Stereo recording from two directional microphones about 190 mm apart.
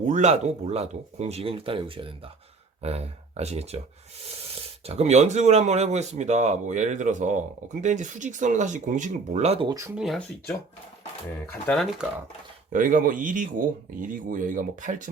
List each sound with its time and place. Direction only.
0.0 s speech: 40° right (ahead or behind)
9.7 s speech: 15° right (ahead or behind)
10.0 s speech: centre (ahead or behind)
11.6 s speech: centre (ahead or behind)
12.7 s speech: 45° right (ahead or behind)